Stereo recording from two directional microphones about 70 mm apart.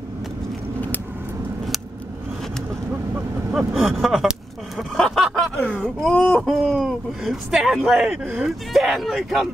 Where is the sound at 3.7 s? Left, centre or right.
Centre.